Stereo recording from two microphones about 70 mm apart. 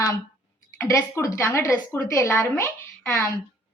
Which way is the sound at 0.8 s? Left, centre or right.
Left.